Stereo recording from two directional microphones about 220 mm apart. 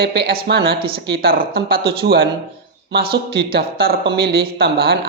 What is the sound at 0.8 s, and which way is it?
Speech, 25° right (ahead or behind).